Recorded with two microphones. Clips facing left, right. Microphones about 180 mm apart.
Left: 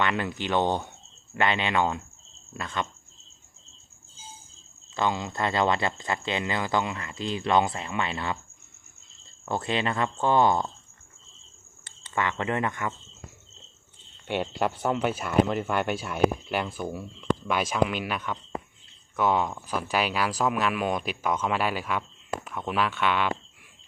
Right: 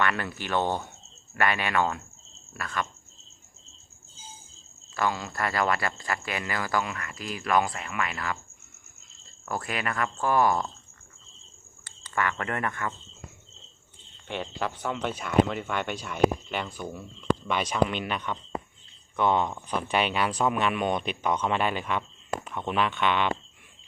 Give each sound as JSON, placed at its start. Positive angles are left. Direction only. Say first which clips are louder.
{"t": 0.0, "sound": "speech", "louder": "left 1 dB", "side_deg": 20}
{"t": 4.9, "sound": "speech", "louder": "left 1 dB", "side_deg": 20}
{"t": 9.5, "sound": "speech", "louder": "left 4 dB", "side_deg": 25}
{"t": 11.9, "sound": "speech", "louder": "even", "side_deg": 25}
{"t": 14.9, "sound": "speech", "louder": "right 2 dB", "side_deg": 5}